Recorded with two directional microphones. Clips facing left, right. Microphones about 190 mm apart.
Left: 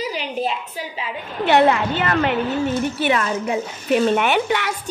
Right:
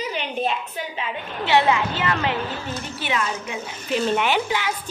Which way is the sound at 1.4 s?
55° left (ahead or behind).